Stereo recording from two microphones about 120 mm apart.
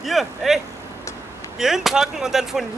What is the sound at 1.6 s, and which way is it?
Speech, 5° right (ahead or behind).